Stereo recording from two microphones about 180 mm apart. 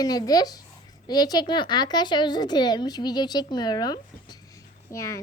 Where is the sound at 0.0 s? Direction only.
20° left (ahead or behind).